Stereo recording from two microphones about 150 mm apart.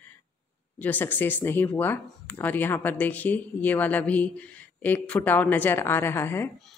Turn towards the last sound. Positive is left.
turn(degrees=15)  # may be behind; listen again after turning